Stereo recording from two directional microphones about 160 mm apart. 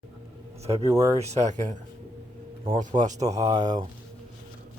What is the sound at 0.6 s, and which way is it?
Speech, 40° right (ahead or behind).